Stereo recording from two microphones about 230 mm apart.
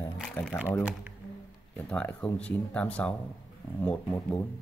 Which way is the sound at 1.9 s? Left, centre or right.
Centre.